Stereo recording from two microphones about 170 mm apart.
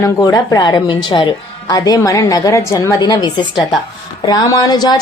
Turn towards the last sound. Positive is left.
turn(degrees=25)  # may be behind; listen again after turning